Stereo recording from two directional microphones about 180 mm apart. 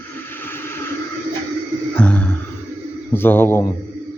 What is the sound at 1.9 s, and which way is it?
Music, 10° left (ahead or behind).